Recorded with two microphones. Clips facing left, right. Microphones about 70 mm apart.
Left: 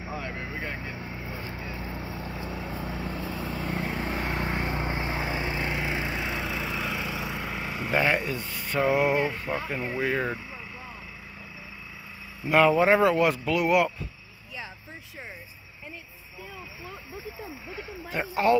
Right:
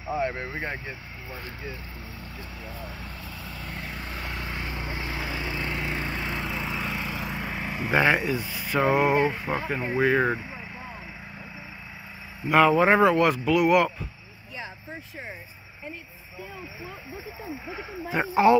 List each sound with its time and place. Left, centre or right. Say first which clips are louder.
0.2 s speech: right 5 dB; right
1.9 s vehicle: left 6 dB; left
3.3 s vehicle: left 7 dB; left
3.7 s vehicle: left 5 dB; left; by 9.9 s centre
10.0 s speech: right 6 dB; centre
12.4 s speech: right 1 dB; centre
17.6 s speech: right 5 dB; centre